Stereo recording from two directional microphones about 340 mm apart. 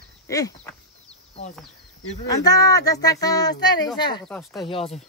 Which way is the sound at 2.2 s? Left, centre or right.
Centre.